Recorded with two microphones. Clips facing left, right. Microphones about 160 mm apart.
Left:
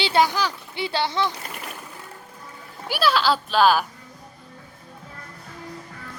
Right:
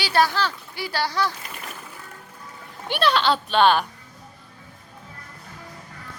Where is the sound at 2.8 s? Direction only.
5° left (ahead or behind).